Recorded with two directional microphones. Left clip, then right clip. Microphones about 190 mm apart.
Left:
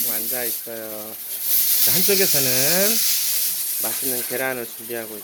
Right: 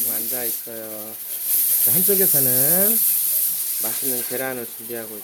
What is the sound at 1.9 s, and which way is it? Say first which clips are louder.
Speech: left 2 dB; centre (ahead or behind).